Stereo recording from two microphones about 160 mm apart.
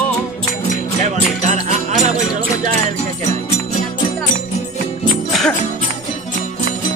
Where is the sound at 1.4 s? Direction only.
50° right (ahead or behind).